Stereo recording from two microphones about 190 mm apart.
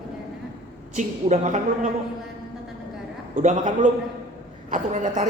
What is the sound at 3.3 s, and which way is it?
A man's voice, 40° right (ahead or behind).